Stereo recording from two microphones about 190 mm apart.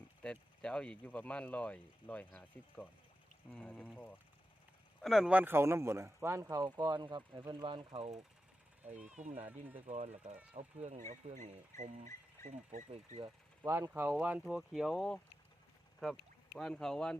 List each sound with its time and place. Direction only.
0.2 s speech: 5° left (ahead or behind)
5.0 s speech: centre (ahead or behind); by 8.2 s 30° right (ahead or behind)
8.8 s speech: 10° right (ahead or behind)
9.0 s speech: 40° right (ahead or behind)
9.5 s speech: 10° right (ahead or behind)
9.8 s speech: 35° right (ahead or behind)
12.9 s speech: 30° right (ahead or behind)
13.7 s speech: 15° right (ahead or behind); by 17.2 s 5° left (ahead or behind)